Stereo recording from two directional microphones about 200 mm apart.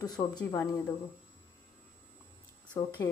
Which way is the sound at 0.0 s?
20° left (ahead or behind).